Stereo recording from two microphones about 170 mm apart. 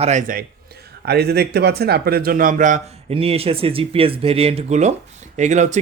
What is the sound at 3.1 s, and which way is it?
Speech, 35° right (ahead or behind).